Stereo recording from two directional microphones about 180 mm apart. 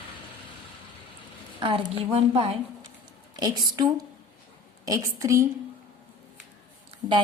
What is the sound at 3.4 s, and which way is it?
A woman's voice, 20° right (ahead or behind).